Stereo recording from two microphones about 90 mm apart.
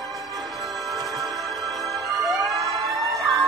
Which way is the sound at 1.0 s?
45° right (ahead or behind).